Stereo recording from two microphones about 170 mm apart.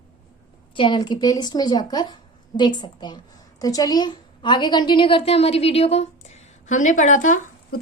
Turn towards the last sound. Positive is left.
turn(degrees=50)  # may be behind; listen again after turning